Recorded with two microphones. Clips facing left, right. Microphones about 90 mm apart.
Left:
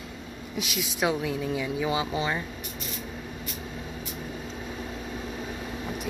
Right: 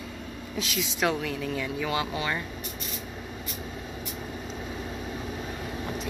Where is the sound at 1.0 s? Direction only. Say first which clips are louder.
Left 1 dB; 15° left (ahead or behind).